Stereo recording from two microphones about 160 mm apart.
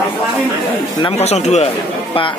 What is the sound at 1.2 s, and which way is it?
Speech, 45° left (ahead or behind).